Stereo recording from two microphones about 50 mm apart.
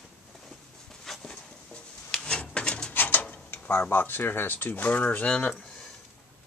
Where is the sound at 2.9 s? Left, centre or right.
Left.